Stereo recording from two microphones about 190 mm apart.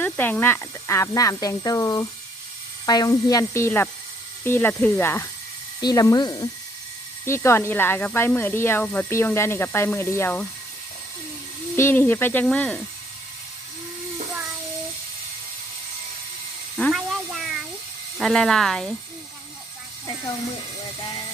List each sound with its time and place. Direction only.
0.0 s speech: 10° left (ahead or behind)
11.8 s speech: 10° left (ahead or behind)
16.7 s a sound: centre (ahead or behind)
18.2 s speech: centre (ahead or behind)